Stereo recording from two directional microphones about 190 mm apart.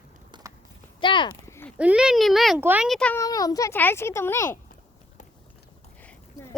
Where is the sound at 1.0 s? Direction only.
25° left (ahead or behind).